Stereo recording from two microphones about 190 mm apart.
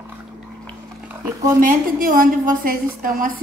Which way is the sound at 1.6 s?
45° right (ahead or behind).